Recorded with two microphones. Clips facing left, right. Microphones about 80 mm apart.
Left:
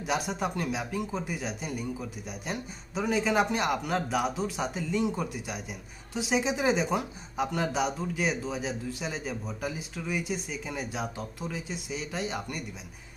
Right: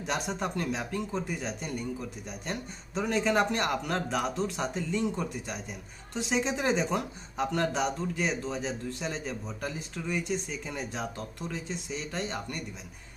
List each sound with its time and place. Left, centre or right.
0.0 s speech: centre